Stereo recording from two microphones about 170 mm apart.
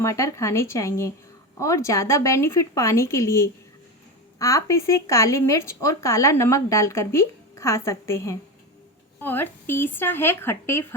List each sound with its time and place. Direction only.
0.0 s speech: 15° left (ahead or behind)